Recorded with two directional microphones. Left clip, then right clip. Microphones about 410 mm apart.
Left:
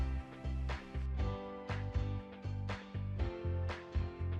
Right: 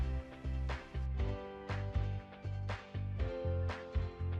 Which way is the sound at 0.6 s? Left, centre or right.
Centre.